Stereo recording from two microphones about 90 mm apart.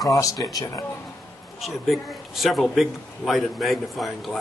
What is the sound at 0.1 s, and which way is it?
Speech, 40° left (ahead or behind).